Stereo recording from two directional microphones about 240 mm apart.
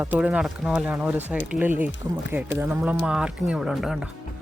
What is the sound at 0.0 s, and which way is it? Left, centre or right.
Speech, centre.